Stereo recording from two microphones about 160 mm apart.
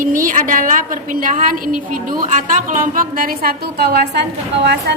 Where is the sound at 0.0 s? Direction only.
55° right (ahead or behind).